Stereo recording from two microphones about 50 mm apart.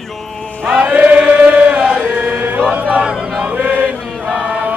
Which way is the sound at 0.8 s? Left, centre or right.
Right.